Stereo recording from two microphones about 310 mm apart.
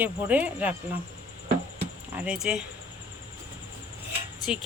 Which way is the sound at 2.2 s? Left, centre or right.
Centre.